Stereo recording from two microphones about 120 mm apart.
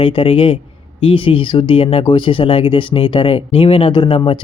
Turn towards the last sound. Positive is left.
turn(degrees=45)  # may be behind; listen again after turning